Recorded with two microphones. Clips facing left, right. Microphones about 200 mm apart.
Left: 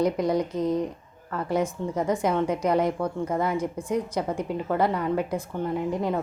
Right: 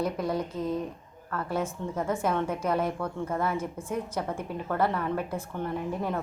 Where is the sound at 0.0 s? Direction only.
15° left (ahead or behind).